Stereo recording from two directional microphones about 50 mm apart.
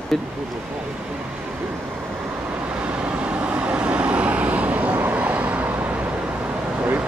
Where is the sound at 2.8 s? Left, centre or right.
Right.